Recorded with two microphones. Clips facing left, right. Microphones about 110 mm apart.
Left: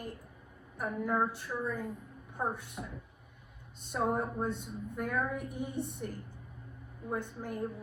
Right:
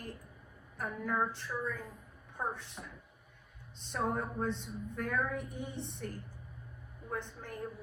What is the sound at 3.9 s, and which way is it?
A woman's voice, 10° left (ahead or behind).